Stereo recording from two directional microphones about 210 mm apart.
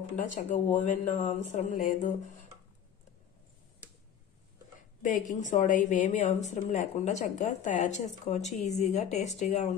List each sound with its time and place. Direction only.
0.1 s a woman's voice: 35° left (ahead or behind)
5.0 s a woman's voice: 35° left (ahead or behind)